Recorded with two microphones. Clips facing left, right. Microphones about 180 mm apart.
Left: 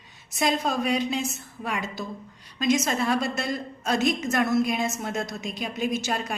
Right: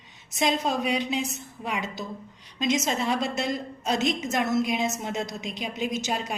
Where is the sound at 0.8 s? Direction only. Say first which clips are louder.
Left 1 dB; 45° left (ahead or behind).